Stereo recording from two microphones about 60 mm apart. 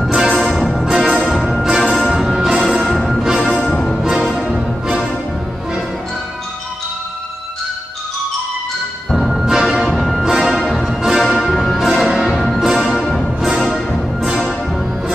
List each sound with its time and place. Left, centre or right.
0.3 s music: centre
4.0 s music: centre
9.1 s music: centre